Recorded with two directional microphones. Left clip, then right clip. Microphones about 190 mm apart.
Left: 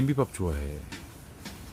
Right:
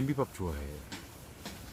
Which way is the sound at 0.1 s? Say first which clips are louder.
Left 5 dB; 40° left (ahead or behind).